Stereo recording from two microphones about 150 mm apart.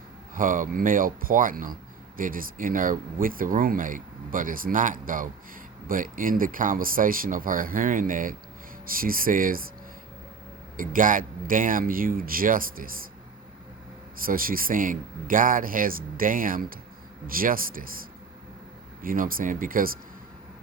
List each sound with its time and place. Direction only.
0.3 s speech: 65° right (ahead or behind)
10.8 s speech: 65° right (ahead or behind)
14.2 s speech: 70° right (ahead or behind)
19.0 s speech: 70° right (ahead or behind)